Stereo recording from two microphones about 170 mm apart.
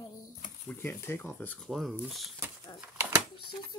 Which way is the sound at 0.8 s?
15° left (ahead or behind).